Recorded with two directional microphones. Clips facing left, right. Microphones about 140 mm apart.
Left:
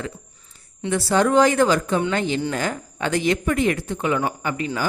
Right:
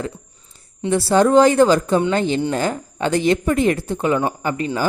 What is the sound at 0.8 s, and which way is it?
Speech, 30° right (ahead or behind).